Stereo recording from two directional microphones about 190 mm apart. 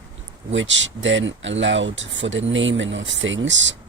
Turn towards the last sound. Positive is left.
turn(degrees=-75)  # may be behind; listen again after turning